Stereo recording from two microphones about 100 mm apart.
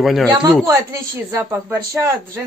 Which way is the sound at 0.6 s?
25° right (ahead or behind).